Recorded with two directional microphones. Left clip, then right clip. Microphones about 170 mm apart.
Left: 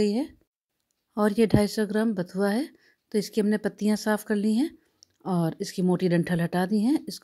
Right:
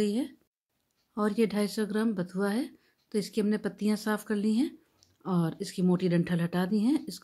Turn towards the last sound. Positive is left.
turn(degrees=35)  # may be behind; listen again after turning